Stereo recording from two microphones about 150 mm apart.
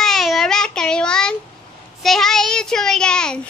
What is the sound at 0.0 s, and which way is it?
Child singing, centre (ahead or behind).